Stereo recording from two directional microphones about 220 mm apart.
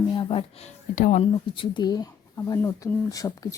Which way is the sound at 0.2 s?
25° left (ahead or behind).